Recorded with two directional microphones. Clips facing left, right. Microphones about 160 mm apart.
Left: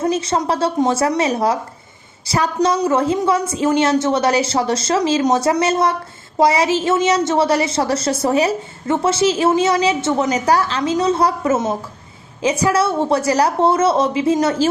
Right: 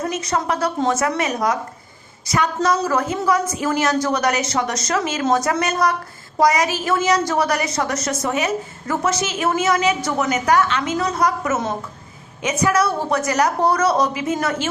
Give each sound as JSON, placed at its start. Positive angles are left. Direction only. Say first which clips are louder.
{"t": 0.0, "sound": "a woman's voice", "louder": "left 4 dB", "side_deg": 30}